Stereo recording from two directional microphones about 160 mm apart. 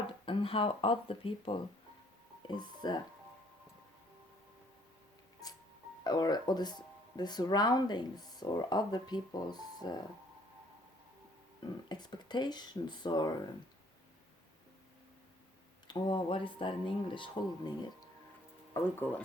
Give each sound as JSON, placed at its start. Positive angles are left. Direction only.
{"t": 0.3, "sound": "speech", "side_deg": 35}
{"t": 6.1, "sound": "speech", "side_deg": 25}
{"t": 11.6, "sound": "speech", "side_deg": 25}
{"t": 15.9, "sound": "speech", "side_deg": 30}
{"t": 18.7, "sound": "speech", "side_deg": 15}